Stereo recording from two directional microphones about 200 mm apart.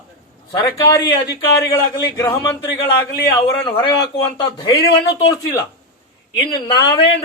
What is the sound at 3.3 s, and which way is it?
A man's voice, 25° left (ahead or behind).